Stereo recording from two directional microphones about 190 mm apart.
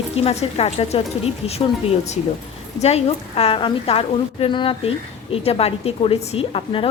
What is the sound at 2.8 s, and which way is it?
A woman's voice, 35° left (ahead or behind).